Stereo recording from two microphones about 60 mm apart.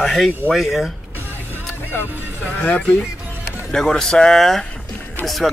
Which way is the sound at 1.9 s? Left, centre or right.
Left.